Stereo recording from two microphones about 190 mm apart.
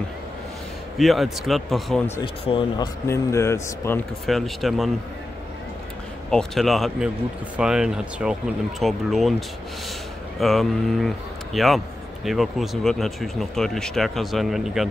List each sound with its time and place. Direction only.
0.9 s speech: centre (ahead or behind)
2.2 s speech: 25° left (ahead or behind)
3.1 s speech: 15° left (ahead or behind)
4.3 s speech: centre (ahead or behind)
6.3 s speech: centre (ahead or behind)
10.4 s speech: centre (ahead or behind)